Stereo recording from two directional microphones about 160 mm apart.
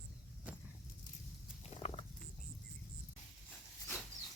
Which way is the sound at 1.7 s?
40° left (ahead or behind).